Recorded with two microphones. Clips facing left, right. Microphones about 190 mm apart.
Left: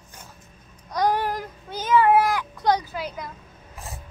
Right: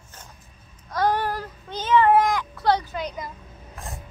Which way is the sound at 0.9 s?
15° left (ahead or behind).